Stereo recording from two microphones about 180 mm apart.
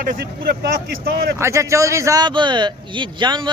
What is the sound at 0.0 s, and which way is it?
Speech, 50° right (ahead or behind).